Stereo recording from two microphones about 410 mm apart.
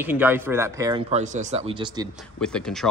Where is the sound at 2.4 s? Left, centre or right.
Centre.